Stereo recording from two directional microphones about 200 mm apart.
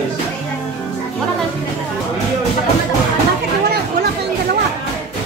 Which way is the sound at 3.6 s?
55° right (ahead or behind).